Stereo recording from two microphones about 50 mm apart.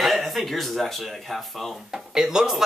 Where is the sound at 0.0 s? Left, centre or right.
Centre.